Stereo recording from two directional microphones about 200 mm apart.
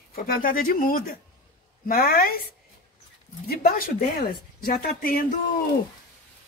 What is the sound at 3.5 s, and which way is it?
A woman's voice, 50° left (ahead or behind).